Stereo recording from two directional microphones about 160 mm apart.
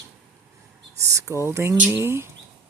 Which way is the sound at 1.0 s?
20° right (ahead or behind).